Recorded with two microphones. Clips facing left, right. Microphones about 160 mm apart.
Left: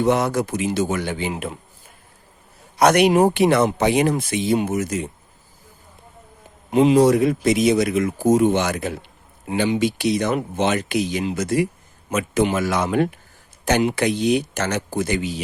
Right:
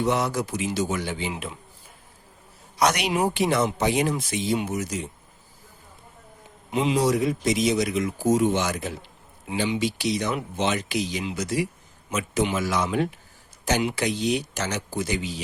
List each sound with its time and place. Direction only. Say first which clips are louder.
0.0 s speech: left 5 dB; 55° left (ahead or behind)
2.7 s speech: left 8 dB; 55° left (ahead or behind)
6.7 s speech: left 8 dB; 50° left (ahead or behind)